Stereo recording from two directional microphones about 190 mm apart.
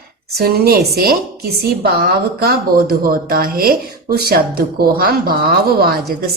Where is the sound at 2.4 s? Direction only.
55° right (ahead or behind).